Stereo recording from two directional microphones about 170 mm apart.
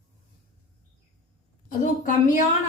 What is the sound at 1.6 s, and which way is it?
Speech, 50° left (ahead or behind).